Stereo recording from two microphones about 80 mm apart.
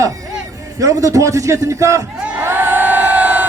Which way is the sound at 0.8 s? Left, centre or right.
Right.